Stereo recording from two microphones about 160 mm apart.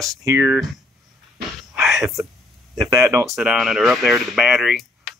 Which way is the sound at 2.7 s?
20° right (ahead or behind).